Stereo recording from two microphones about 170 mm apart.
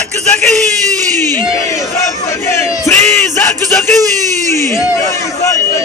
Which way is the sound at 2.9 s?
10° left (ahead or behind).